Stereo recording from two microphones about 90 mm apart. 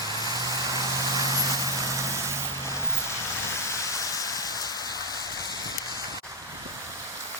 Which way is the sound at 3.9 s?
45° left (ahead or behind).